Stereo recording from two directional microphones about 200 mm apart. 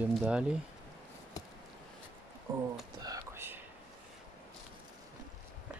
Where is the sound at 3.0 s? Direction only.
15° right (ahead or behind).